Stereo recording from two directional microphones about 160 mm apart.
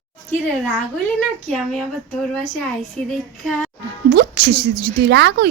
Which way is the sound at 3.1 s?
5° left (ahead or behind).